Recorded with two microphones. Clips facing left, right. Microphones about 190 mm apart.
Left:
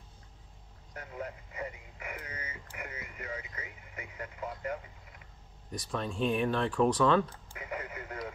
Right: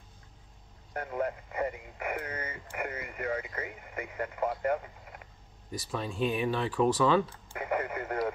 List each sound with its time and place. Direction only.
0.9 s speech: 60° right (ahead or behind)
5.7 s speech: 5° right (ahead or behind)
7.5 s speech: 60° right (ahead or behind)